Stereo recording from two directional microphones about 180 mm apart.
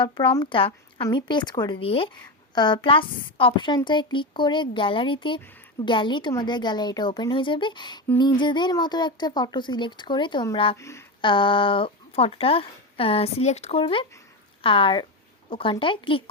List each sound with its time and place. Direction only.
0.0 s speech: 25° left (ahead or behind)
10.8 s speech: 15° left (ahead or behind)
11.2 s speech: 25° left (ahead or behind)